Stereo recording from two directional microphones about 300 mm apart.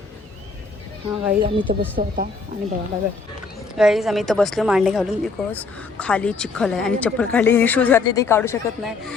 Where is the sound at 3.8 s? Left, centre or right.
Centre.